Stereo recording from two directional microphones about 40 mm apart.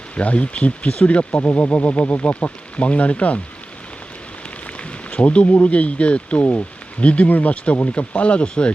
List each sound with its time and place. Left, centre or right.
0.2 s speech: left
4.6 s speech: left
7.5 s speech: left